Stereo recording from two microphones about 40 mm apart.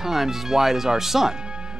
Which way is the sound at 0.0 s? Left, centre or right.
Centre.